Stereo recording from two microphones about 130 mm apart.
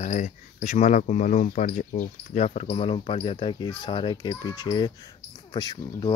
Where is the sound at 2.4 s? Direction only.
55° left (ahead or behind); by 4.9 s 35° left (ahead or behind).